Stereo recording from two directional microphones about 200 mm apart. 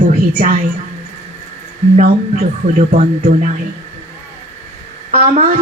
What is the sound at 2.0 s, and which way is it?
A man's voice, 40° right (ahead or behind).